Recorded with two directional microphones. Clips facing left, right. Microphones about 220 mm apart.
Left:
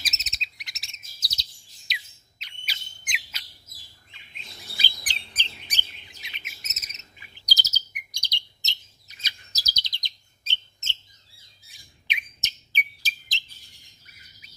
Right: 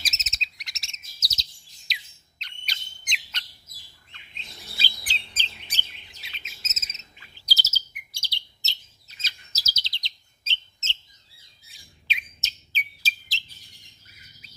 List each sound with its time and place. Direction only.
0.0 s chirp: centre (ahead or behind)
1.9 s squawk: centre (ahead or behind)
2.4 s bird: 5° left (ahead or behind)
6.2 s chirp: 15° left (ahead or behind)
11.7 s bird: 15° left (ahead or behind)